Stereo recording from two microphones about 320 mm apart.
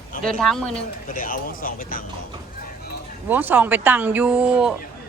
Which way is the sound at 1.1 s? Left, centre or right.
Left.